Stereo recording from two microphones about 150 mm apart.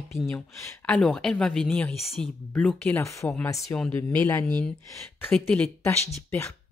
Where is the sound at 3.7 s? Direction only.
10° left (ahead or behind).